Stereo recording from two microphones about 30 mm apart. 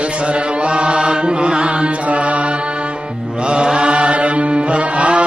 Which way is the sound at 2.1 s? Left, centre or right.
Right.